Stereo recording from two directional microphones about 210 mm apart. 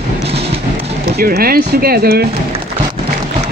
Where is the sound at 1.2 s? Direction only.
45° right (ahead or behind).